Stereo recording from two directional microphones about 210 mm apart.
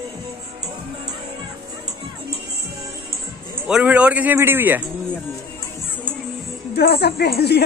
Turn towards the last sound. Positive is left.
turn(degrees=50)  # may be behind; listen again after turning